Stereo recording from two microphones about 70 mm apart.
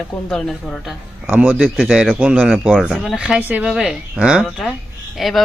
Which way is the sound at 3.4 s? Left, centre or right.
Right.